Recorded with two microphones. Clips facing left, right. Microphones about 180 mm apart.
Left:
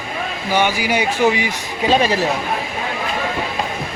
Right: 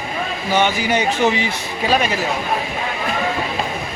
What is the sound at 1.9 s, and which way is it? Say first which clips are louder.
Speech: left 3 dB; 30° left (ahead or behind).